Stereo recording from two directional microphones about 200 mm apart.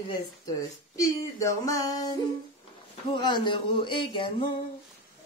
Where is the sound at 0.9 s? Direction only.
15° left (ahead or behind).